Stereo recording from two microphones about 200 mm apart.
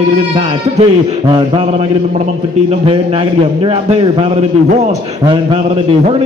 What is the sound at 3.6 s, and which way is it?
Speech, 25° right (ahead or behind).